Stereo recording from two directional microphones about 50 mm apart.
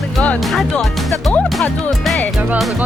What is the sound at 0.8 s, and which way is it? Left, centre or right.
Speech, centre.